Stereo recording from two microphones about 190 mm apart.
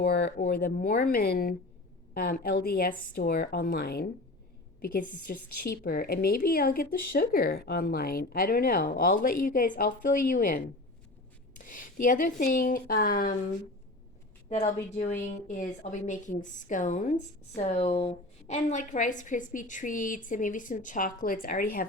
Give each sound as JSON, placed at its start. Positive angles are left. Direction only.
{"t": 0.0, "sound": "speech", "side_deg": 55}
{"t": 0.3, "sound": "a woman's voice", "side_deg": 45}
{"t": 14.5, "sound": "a woman's voice", "side_deg": 35}